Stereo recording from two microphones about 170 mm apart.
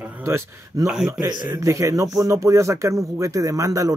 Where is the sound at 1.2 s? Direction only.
25° right (ahead or behind).